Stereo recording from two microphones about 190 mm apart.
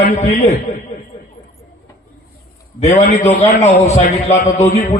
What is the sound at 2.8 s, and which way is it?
A man's voice, 35° left (ahead or behind).